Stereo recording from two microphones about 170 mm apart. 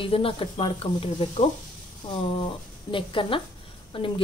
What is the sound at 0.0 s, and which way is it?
A woman's voice, 30° left (ahead or behind).